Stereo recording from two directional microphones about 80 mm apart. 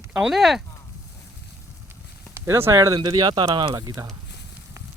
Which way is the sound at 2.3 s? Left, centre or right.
Right.